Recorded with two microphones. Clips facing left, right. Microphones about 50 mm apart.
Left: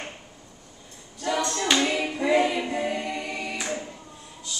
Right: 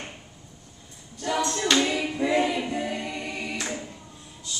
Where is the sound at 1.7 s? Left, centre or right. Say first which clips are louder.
Even; centre.